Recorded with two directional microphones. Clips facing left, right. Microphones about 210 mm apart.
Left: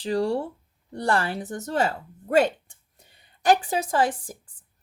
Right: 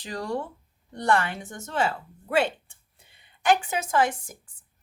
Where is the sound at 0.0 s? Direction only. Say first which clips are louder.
Left 6 dB; 30° left (ahead or behind).